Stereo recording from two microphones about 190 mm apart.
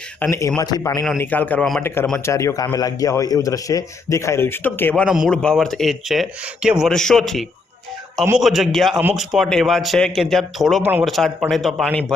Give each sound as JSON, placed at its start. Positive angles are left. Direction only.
{"t": 0.2, "sound": "a man's voice", "side_deg": 15}
{"t": 1.2, "sound": "a man's voice", "side_deg": 10}
{"t": 2.1, "sound": "a man's voice", "side_deg": 15}
{"t": 5.0, "sound": "speech", "side_deg": -5}